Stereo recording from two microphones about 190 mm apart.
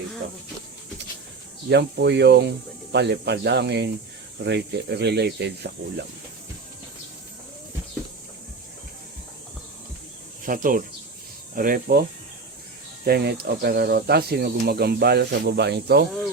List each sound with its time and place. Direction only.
1.7 s speech: 65° right (ahead or behind)
10.4 s speech: 45° right (ahead or behind)
13.1 s speech: 55° right (ahead or behind)